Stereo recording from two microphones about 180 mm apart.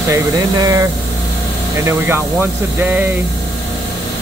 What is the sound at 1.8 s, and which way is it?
Speech, 15° right (ahead or behind).